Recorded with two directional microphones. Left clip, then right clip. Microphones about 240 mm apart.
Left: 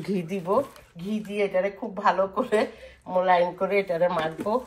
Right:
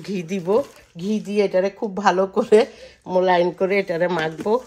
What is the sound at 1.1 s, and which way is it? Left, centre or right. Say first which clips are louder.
Speech: right 6 dB; right.